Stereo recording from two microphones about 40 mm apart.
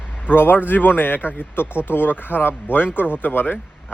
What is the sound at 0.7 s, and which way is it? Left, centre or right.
Speech, left.